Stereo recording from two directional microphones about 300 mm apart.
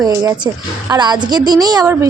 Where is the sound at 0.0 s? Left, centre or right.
Centre.